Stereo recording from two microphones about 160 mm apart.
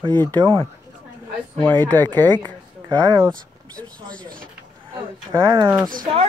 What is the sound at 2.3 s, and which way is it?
Speech, 25° right (ahead or behind).